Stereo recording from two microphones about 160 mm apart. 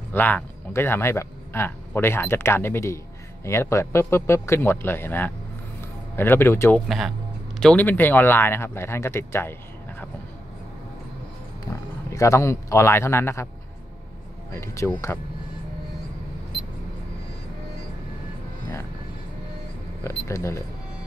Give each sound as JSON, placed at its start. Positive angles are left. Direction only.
{"t": 0.1, "sound": "speech", "side_deg": 10}
{"t": 12.1, "sound": "speech", "side_deg": 20}
{"t": 14.5, "sound": "speech", "side_deg": 15}
{"t": 20.0, "sound": "speech", "side_deg": 15}